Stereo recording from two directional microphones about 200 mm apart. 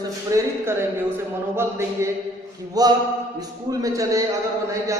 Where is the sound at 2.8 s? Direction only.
20° right (ahead or behind).